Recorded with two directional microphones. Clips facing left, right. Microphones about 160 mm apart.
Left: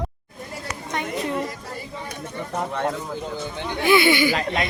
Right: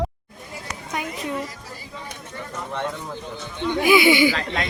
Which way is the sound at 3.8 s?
15° right (ahead or behind).